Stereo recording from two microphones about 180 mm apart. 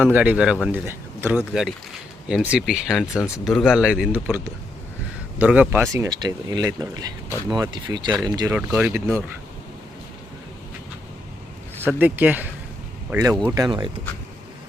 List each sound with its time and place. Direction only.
0.0 s a man's voice: 10° right (ahead or behind)
3.2 s speech: 15° left (ahead or behind)
3.4 s a man's voice: centre (ahead or behind)
5.9 s speech: 20° right (ahead or behind)
8.4 s a man's voice: 10° right (ahead or behind)
11.9 s a man's voice: 10° right (ahead or behind)